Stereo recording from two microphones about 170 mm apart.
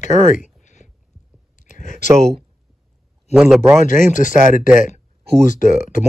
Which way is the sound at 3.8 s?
50° left (ahead or behind).